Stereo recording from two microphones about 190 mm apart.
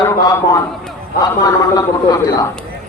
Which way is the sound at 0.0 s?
15° left (ahead or behind).